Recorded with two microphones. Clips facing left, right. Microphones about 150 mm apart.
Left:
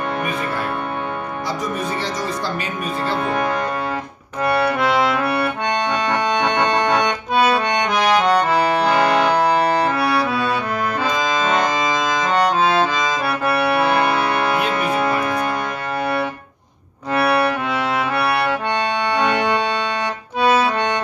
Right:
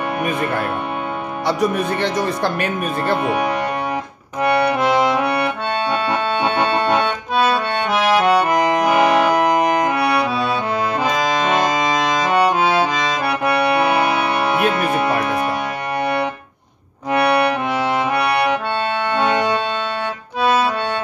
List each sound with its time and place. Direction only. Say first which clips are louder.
1.5 s speech: right 7 dB; 65° right (ahead or behind)
3.3 s music: right 2 dB; 15° right (ahead or behind)
4.4 s accordion: right 2 dB; 20° right (ahead or behind)
13.7 s music: right 1 dB; 10° right (ahead or behind)
17.1 s accordion: right 2 dB; 20° right (ahead or behind)
20.4 s accordion: left 1 dB; centre (ahead or behind)